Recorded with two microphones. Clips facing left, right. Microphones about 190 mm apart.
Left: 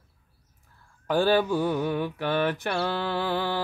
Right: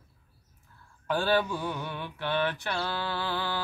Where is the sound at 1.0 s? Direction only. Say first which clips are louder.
Left 4 dB; 40° left (ahead or behind).